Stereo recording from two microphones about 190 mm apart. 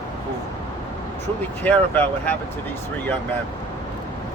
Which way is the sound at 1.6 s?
10° left (ahead or behind).